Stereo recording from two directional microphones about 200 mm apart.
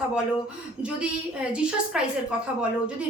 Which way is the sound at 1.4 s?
5° right (ahead or behind).